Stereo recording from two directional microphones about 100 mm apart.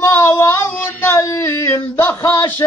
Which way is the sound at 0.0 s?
25° left (ahead or behind).